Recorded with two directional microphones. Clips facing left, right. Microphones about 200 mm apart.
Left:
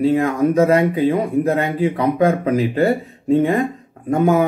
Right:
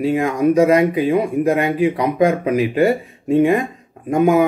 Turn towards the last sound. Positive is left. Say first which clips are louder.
# right 1 dB
turn(degrees=-15)  # may be behind; listen again after turning